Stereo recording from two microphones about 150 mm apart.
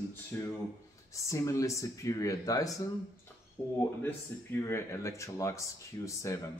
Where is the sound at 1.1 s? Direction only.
20° left (ahead or behind).